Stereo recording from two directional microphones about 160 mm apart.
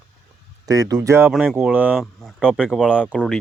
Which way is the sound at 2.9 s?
5° right (ahead or behind).